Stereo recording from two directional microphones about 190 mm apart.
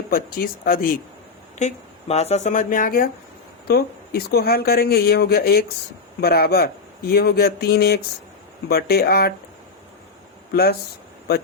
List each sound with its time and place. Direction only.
0.1 s speech: 50° left (ahead or behind)
1.5 s speech: 35° left (ahead or behind); by 9.3 s 55° left (ahead or behind)
10.5 s speech: 55° left (ahead or behind)